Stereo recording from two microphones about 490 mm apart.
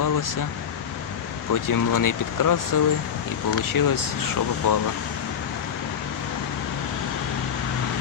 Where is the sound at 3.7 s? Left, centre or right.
Left.